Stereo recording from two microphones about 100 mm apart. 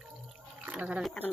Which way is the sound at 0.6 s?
10° right (ahead or behind).